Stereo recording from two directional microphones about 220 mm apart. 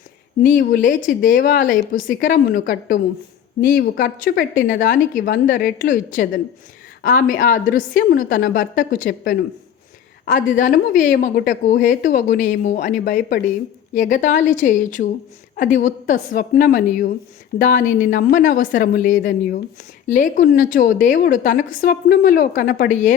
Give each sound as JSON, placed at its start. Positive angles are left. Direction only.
{"t": 0.4, "sound": "a woman's voice", "side_deg": 35}